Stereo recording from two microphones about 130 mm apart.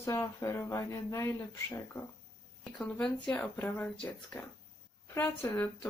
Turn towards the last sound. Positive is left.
turn(degrees=15)  # may be behind; listen again after turning